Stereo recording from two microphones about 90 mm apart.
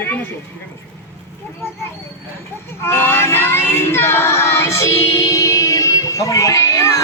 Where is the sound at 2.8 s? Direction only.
30° left (ahead or behind).